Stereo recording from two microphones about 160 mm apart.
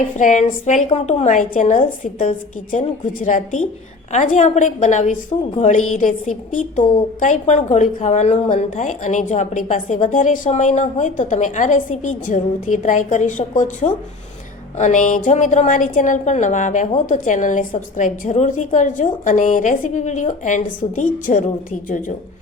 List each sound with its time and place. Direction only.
0.2 s a woman's voice: 50° left (ahead or behind)